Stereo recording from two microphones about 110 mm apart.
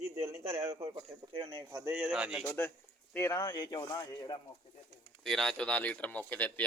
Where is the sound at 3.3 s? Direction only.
40° left (ahead or behind).